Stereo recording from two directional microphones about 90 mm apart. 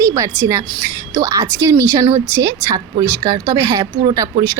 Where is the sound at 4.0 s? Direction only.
45° right (ahead or behind).